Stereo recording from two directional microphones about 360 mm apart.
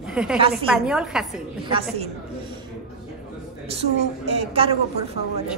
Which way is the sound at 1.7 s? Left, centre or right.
Centre.